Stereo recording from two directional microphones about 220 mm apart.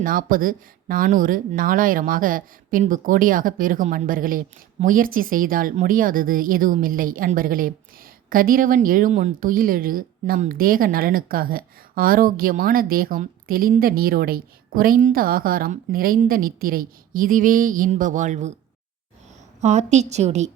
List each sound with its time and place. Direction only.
0.0 s speech: 40° right (ahead or behind)
19.6 s speech: 30° right (ahead or behind)